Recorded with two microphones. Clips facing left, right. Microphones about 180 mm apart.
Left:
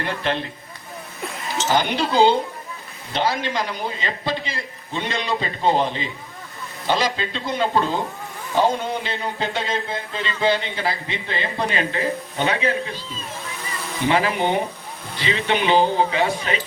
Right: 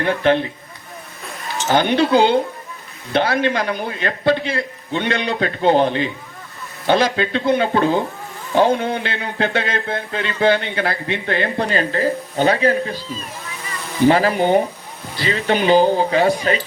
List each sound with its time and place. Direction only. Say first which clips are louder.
0.0 s a man's voice: right 8 dB; 55° right (ahead or behind)
1.7 s a man's voice: right 6 dB; 60° right (ahead or behind)
11.7 s speech: right 4 dB; 40° right (ahead or behind)
14.1 s speech: right 5 dB; 40° right (ahead or behind)